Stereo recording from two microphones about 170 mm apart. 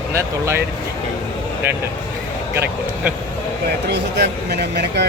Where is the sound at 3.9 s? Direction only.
80° right.